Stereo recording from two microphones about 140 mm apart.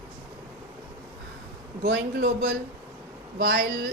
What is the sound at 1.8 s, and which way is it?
A man's voice, 90° right.